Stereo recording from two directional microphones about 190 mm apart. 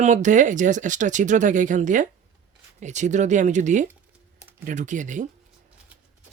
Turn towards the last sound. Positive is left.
turn(degrees=-40)  # may be behind; listen again after turning